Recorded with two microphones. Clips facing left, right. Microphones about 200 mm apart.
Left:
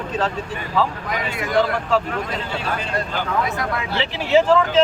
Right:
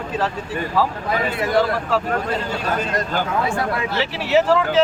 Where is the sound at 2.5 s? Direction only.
45° right (ahead or behind).